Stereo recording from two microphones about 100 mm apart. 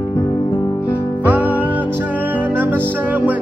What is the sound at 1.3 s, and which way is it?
Music, 15° right (ahead or behind).